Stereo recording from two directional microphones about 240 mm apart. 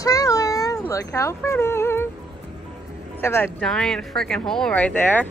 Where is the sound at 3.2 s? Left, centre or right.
Centre.